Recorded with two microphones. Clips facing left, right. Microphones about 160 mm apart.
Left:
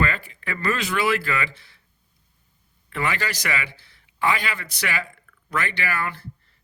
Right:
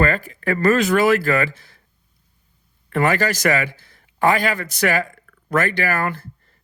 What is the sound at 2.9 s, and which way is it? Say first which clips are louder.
Speech: right 8 dB; 45° right (ahead or behind).